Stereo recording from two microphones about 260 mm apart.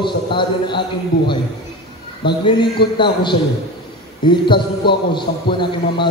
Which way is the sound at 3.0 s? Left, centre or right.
Centre.